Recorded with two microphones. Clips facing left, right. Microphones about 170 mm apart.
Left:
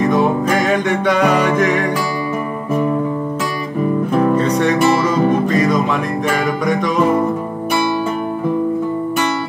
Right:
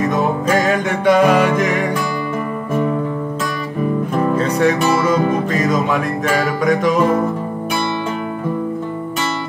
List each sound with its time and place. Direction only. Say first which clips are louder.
1.2 s music: right 2 dB; 5° right (ahead or behind)
4.4 s music: left 1 dB; 5° right (ahead or behind)